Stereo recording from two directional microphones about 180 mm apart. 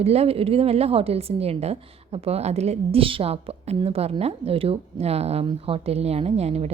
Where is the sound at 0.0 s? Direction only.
35° right (ahead or behind).